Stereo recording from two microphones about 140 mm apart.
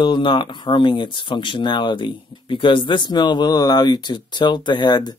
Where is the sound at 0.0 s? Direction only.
35° left (ahead or behind).